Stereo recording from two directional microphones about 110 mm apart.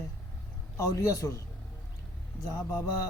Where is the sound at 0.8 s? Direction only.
30° left (ahead or behind).